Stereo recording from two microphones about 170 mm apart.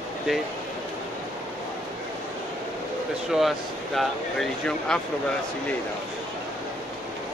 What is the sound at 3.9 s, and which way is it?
Speech, centre (ahead or behind).